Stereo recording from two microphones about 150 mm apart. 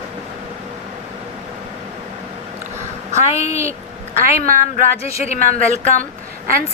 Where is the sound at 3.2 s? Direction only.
45° left (ahead or behind).